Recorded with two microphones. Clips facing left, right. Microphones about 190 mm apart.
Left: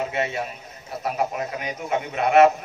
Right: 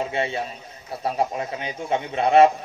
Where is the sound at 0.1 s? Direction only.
30° right (ahead or behind).